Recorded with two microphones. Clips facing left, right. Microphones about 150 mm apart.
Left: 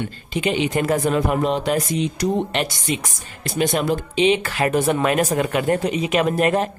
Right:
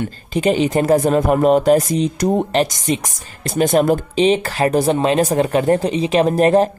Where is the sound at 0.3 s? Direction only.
40° right (ahead or behind).